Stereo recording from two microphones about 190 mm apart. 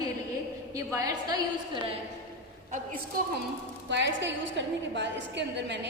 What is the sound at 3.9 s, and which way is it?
A woman's voice, 70° right (ahead or behind).